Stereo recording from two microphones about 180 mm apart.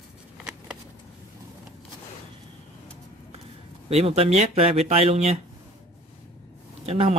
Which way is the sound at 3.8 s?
35° right (ahead or behind).